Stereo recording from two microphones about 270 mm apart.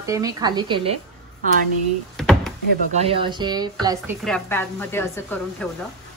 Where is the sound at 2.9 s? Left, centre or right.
Centre.